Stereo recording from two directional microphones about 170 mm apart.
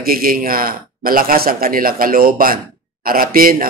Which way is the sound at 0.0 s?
60° right (ahead or behind).